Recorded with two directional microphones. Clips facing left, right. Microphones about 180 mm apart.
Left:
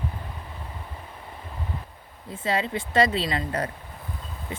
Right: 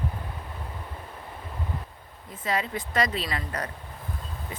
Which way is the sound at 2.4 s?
30° left (ahead or behind).